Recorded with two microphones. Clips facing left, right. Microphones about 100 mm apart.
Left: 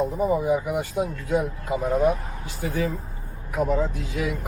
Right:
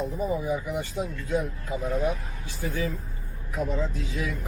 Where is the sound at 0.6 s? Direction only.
55° left (ahead or behind).